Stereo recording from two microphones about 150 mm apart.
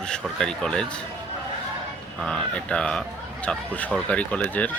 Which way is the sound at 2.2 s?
5° left (ahead or behind).